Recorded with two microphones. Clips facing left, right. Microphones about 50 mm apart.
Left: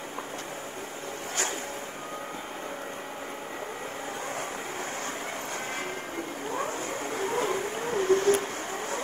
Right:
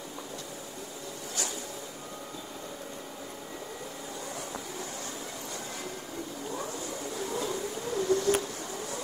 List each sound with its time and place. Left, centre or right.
6.5 s vehicle: left